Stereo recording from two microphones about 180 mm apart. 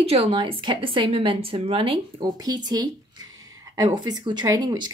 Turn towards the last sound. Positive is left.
turn(degrees=-20)  # may be behind; listen again after turning